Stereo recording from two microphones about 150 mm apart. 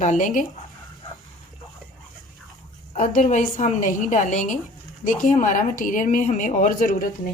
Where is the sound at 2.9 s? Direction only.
55° left (ahead or behind).